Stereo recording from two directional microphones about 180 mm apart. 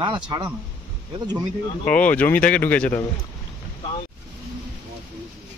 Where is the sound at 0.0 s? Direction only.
25° right (ahead or behind).